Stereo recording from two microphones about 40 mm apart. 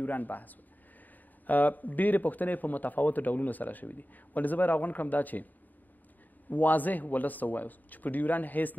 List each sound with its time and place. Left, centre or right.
0.0 s a man's voice: left
6.5 s a man's voice: left